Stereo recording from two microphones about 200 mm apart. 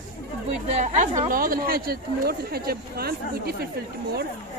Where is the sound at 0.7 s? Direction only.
35° right (ahead or behind).